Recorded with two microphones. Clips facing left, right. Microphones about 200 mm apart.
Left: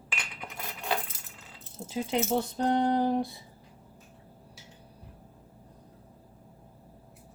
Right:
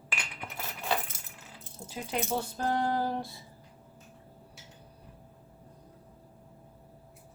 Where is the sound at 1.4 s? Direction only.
20° left (ahead or behind).